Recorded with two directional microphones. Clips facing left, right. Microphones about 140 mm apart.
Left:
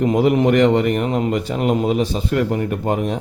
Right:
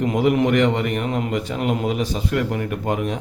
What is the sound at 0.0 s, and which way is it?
A man's voice, 35° left (ahead or behind).